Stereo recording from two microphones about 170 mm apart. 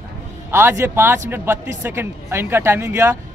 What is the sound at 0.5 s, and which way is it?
Speech, 15° right (ahead or behind).